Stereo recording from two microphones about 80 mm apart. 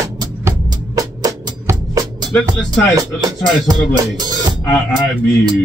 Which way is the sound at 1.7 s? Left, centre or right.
Right.